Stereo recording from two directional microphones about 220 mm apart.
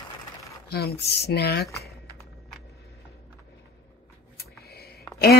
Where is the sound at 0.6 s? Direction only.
45° left (ahead or behind).